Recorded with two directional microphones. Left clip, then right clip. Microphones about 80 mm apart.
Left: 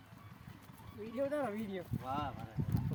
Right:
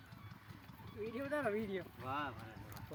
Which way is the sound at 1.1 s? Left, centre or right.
Left.